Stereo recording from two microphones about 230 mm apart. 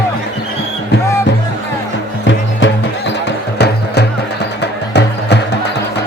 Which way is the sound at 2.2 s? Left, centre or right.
Left.